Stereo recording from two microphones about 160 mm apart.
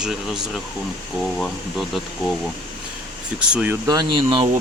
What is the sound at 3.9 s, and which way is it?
Speech, 25° right (ahead or behind).